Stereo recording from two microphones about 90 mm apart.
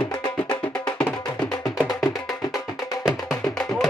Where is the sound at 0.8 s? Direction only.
15° left (ahead or behind).